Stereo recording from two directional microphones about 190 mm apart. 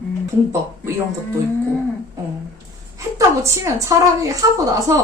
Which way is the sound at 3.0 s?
15° right (ahead or behind).